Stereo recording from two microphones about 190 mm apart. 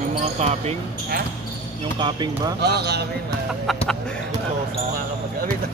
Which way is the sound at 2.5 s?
60° right (ahead or behind).